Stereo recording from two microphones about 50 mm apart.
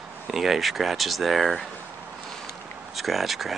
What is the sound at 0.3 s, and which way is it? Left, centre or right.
Speech, centre.